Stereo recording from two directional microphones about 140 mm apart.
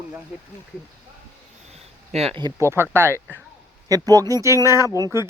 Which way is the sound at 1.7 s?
50° right (ahead or behind).